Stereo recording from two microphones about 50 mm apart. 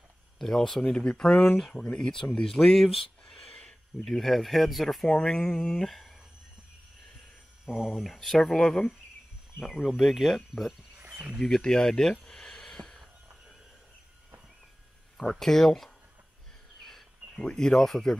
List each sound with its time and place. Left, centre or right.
0.4 s speech: centre
0.9 s speech: centre
5.0 s speech: centre
7.6 s speech: centre
7.9 s speech: centre
11.0 s a sound: right
11.4 s a sound: centre
15.1 s speech: centre
16.8 s a sound: centre